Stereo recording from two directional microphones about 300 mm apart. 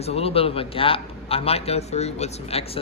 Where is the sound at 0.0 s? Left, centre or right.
Centre.